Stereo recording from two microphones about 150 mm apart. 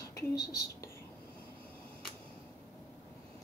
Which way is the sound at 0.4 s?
90° left.